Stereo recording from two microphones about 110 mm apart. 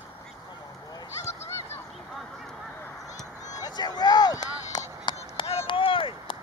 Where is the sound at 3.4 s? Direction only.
35° left (ahead or behind).